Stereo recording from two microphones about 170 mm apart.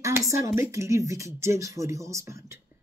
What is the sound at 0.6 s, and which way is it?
Speech, 15° right (ahead or behind).